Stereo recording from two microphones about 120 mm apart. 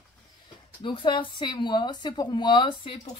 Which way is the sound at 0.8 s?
45° left (ahead or behind).